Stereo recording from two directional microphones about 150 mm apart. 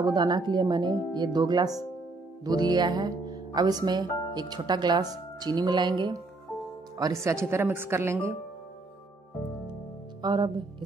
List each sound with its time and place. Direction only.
0.0 s speech: 30° right (ahead or behind)
10.2 s speech: 30° right (ahead or behind)